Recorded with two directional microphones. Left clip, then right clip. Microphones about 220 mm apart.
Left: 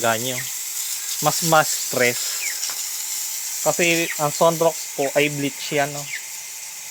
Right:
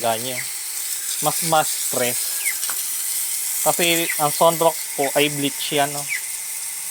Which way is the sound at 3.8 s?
50° left (ahead or behind).